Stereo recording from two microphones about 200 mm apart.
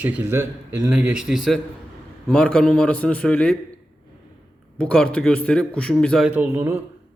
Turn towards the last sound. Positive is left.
turn(degrees=-10)  # may be behind; listen again after turning